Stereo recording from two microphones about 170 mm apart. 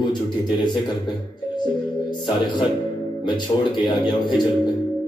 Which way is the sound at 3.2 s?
25° left (ahead or behind).